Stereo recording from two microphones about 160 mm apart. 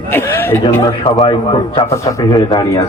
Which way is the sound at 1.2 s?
30° left (ahead or behind).